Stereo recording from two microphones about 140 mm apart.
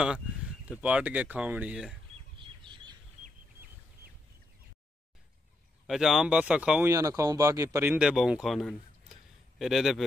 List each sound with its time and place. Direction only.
0.7 s speech: 10° right (ahead or behind)
2.3 s chirp: 35° right (ahead or behind)
5.9 s speech: centre (ahead or behind)
6.9 s speech: 20° right (ahead or behind)
8.0 s speech: 5° right (ahead or behind)